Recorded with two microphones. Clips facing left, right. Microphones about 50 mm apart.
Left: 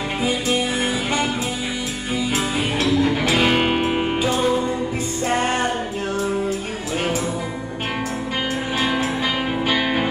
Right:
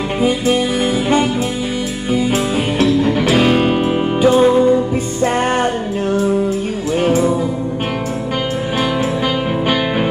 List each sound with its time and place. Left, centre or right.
0.2 s music: right
2.0 s music: right
3.4 s music: left
4.2 s music: right